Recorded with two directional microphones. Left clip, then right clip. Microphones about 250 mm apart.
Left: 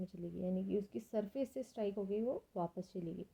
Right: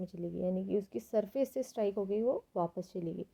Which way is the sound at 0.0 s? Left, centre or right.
Right.